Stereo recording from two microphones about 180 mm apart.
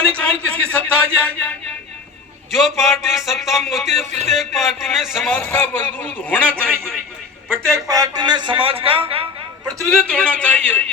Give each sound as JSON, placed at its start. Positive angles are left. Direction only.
{"t": 0.2, "sound": "a sound", "side_deg": 5}
{"t": 2.5, "sound": "a man's voice", "side_deg": 0}
{"t": 6.7, "sound": "a man's voice", "side_deg": -10}
{"t": 9.8, "sound": "a man's voice", "side_deg": 5}